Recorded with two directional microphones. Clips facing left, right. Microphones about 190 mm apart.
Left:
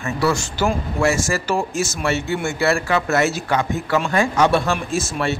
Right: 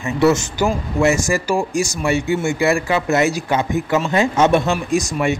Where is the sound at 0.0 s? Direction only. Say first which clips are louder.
Right 5 dB; 20° right (ahead or behind).